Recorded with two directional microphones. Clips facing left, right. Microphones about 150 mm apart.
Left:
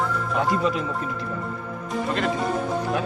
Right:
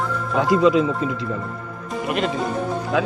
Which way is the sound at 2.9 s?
90° right.